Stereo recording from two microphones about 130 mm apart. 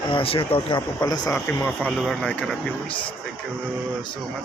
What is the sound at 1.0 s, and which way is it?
Speech, 30° left (ahead or behind).